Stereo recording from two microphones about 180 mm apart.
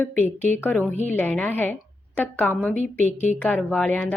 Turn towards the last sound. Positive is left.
turn(degrees=10)  # may be behind; listen again after turning